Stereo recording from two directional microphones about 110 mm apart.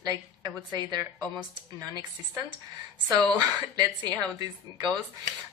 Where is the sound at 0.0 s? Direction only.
30° right (ahead or behind).